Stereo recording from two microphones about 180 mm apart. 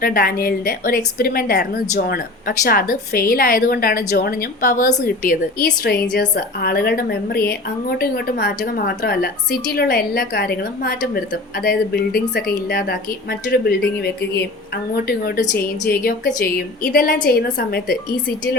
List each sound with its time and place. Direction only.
0.0 s a woman's voice: 55° left (ahead or behind)